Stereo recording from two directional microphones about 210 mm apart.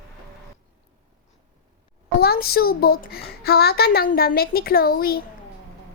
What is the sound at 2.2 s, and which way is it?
A child's voice, 45° left (ahead or behind).